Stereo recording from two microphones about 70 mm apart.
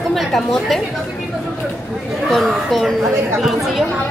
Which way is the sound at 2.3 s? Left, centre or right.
Centre.